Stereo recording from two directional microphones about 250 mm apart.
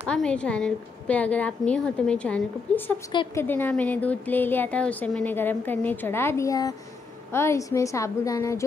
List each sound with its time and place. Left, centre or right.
0.1 s a woman's voice: centre
3.1 s speech: centre
3.4 s speech: centre